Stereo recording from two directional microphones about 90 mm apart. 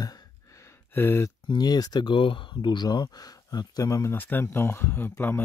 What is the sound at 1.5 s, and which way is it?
Speech, 50° left (ahead or behind).